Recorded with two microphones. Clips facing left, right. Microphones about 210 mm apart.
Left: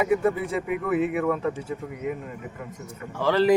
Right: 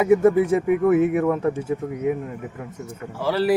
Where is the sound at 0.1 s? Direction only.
45° right (ahead or behind).